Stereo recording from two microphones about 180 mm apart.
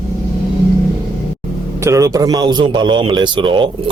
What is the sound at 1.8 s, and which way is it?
A man's voice, 15° right (ahead or behind).